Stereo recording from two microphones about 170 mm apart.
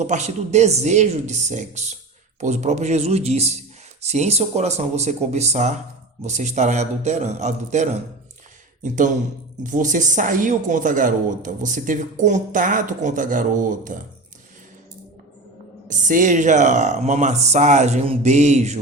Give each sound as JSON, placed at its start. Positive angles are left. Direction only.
{"t": 0.0, "sound": "speech", "side_deg": -45}
{"t": 15.9, "sound": "speech", "side_deg": -50}